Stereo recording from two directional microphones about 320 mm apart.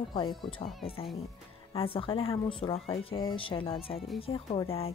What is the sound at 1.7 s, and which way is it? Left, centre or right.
Speech, centre.